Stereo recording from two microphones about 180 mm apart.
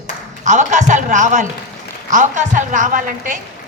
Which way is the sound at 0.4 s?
40° right (ahead or behind).